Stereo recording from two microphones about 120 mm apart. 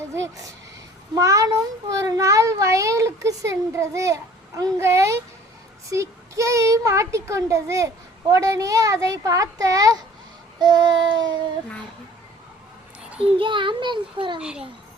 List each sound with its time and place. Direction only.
0.1 s a child's voice: 25° right (ahead or behind)
10.6 s child singing: 35° right (ahead or behind)
13.1 s a child's voice: 50° right (ahead or behind)
14.3 s a child's voice: 5° right (ahead or behind)